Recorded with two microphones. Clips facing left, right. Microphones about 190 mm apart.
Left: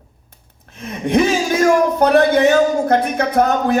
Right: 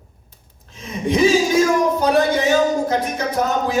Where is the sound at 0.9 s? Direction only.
60° left (ahead or behind).